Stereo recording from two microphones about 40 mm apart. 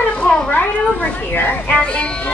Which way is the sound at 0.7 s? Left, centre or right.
Left.